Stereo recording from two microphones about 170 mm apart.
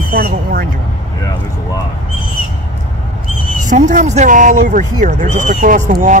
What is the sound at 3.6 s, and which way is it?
Speech, 50° right (ahead or behind).